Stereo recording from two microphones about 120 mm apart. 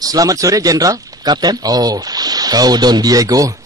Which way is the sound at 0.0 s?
30° right (ahead or behind).